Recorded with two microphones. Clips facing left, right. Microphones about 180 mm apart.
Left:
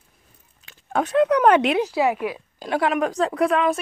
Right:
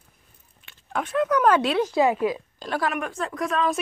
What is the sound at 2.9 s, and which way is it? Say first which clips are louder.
Speech: left 6 dB; 35° left (ahead or behind).